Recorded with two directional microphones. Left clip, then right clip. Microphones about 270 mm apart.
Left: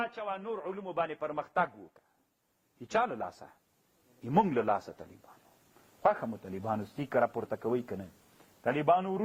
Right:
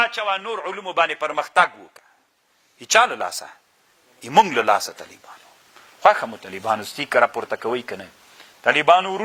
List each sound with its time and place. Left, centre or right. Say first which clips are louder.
0.0 s a man's voice: right 15 dB; centre
4.4 s a man's voice: right 13 dB; centre
6.0 s a man's voice: right 13 dB; centre
6.2 s a man's voice: right 12 dB; right
6.9 s a man's voice: right 11 dB; centre